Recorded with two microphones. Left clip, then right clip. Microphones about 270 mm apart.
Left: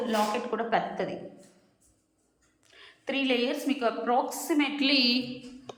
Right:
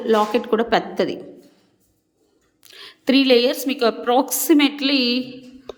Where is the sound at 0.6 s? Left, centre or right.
Right.